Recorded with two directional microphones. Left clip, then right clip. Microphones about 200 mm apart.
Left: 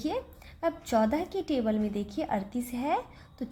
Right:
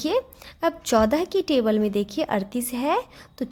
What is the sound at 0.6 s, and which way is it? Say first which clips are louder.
A woman's voice: right 7 dB; 45° right (ahead or behind).